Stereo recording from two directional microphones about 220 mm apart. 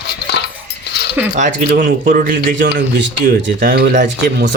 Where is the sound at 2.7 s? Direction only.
55° right (ahead or behind).